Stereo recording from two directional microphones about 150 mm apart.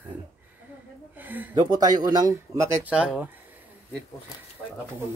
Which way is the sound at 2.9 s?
10° right (ahead or behind).